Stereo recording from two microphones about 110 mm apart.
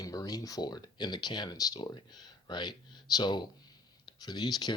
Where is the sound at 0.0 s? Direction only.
35° left (ahead or behind).